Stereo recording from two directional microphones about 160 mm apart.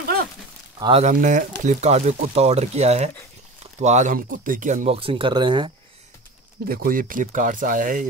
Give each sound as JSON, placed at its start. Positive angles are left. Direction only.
{"t": 0.0, "sound": "a sound", "side_deg": -75}
{"t": 0.7, "sound": "speech", "side_deg": -30}
{"t": 1.0, "sound": "speech", "side_deg": -55}
{"t": 4.8, "sound": "speech", "side_deg": -35}
{"t": 6.7, "sound": "speech", "side_deg": -65}